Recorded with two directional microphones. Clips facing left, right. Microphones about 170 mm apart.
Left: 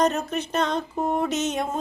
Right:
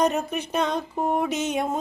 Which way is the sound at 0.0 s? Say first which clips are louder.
Even; 10° right (ahead or behind).